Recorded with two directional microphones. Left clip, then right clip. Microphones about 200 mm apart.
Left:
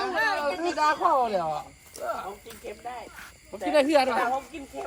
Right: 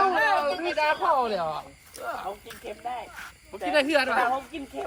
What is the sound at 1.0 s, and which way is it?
Speech, 40° left (ahead or behind).